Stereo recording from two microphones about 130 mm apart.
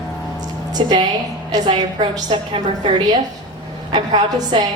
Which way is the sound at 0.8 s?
40° right (ahead or behind).